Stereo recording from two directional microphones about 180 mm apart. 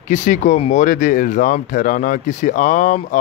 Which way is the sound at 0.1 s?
45° left (ahead or behind).